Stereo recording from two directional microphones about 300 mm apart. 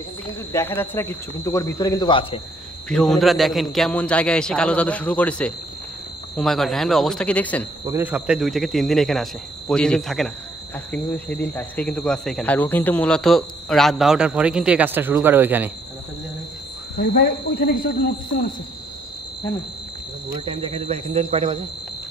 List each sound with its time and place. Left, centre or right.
0.5 s speech: centre
2.9 s speech: centre
7.8 s speech: centre
17.0 s speech: left
20.4 s speech: centre